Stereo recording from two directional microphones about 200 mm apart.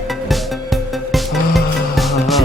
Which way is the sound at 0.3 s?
Centre (ahead or behind).